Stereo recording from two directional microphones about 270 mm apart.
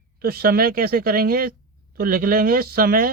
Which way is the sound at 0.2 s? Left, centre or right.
Right.